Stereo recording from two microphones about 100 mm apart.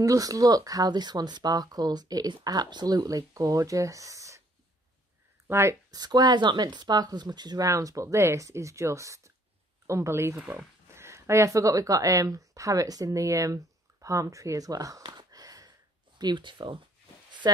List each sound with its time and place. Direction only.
0.0 s speech: 35° right (ahead or behind)
5.5 s speech: 25° right (ahead or behind)
5.9 s speech: 40° right (ahead or behind)
15.0 s a sound: 45° right (ahead or behind)
16.2 s speech: 50° right (ahead or behind)